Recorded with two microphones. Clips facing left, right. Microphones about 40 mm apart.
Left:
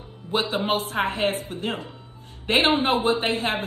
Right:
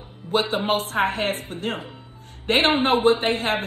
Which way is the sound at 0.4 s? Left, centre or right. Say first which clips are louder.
Right 1 dB; right.